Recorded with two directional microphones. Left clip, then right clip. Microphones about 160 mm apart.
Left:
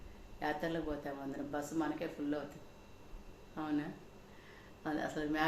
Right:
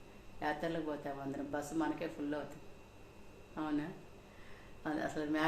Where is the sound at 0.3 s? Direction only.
5° right (ahead or behind).